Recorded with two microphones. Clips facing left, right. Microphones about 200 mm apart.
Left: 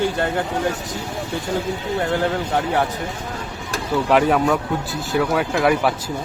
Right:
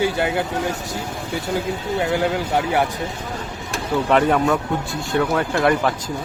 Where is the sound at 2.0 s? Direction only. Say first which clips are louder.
Right 1 dB; 5° right (ahead or behind).